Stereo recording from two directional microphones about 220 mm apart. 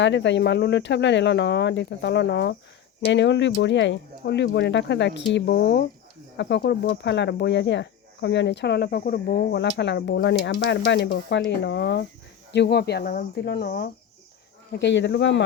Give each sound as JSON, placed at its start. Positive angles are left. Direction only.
{"t": 0.0, "sound": "speech", "side_deg": 55}